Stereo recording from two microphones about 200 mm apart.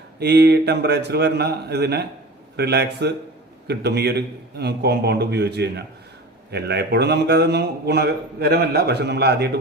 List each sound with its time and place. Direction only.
0.2 s a man's voice: 55° right (ahead or behind)